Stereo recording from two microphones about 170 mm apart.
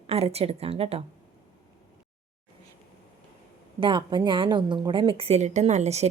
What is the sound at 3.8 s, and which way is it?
A woman's voice, 30° right (ahead or behind).